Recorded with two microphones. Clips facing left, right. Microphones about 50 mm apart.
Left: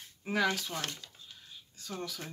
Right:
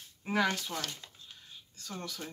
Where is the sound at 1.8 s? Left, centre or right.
Centre.